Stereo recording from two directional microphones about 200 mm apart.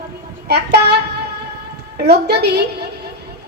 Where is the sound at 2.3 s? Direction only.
55° right (ahead or behind).